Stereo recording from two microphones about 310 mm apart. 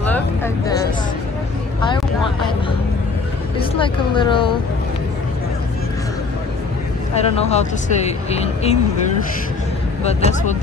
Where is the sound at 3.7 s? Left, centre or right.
Centre.